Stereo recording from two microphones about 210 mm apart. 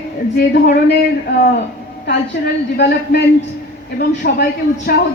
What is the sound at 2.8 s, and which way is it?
A man's voice, 55° left (ahead or behind).